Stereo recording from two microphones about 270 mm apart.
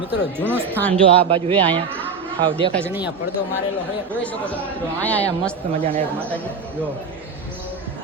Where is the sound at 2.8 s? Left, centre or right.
Centre.